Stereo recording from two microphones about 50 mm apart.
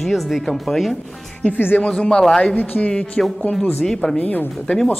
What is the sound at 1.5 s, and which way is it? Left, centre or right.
Speech, left.